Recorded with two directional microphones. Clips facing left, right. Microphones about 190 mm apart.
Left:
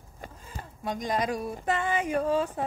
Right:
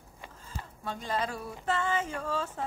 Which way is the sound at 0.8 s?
15° left (ahead or behind).